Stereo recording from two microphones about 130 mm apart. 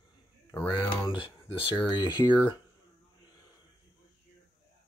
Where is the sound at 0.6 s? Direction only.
15° left (ahead or behind).